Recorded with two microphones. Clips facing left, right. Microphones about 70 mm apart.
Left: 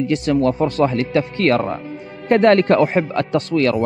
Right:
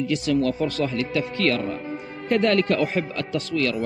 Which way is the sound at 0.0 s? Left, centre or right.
Left.